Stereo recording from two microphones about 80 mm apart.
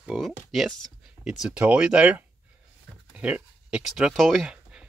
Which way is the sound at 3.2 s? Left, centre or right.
Centre.